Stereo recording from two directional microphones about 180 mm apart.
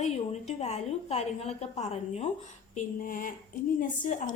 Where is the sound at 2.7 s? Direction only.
50° left (ahead or behind).